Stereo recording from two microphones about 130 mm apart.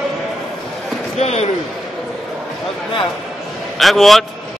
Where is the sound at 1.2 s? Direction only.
55° left (ahead or behind).